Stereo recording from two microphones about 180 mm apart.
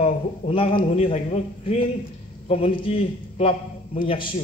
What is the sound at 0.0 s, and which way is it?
A man's voice, 30° left (ahead or behind).